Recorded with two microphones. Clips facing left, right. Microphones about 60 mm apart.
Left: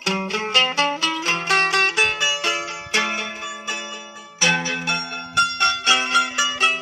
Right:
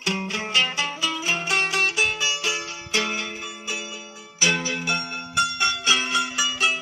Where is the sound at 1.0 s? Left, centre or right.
Left.